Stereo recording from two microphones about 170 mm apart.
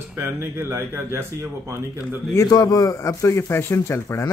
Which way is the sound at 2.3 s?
20° left (ahead or behind).